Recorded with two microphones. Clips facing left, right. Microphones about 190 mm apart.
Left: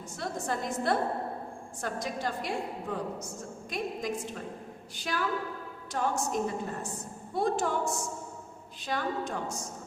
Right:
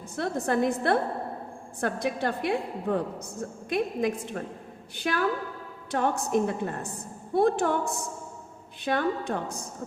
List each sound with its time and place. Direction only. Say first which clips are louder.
0.2 s a woman's voice: right 8 dB; 60° right (ahead or behind)